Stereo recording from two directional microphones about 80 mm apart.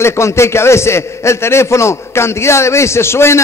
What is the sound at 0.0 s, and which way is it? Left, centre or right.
A man's voice, left.